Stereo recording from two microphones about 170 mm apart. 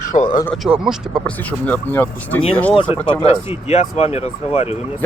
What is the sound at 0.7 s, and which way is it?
Speech, 5° right (ahead or behind).